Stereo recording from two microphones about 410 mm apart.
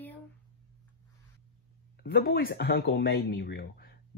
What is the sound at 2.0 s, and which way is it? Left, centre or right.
Speech, left.